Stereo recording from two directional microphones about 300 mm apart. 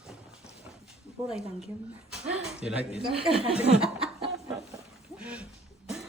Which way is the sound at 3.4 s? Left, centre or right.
Centre.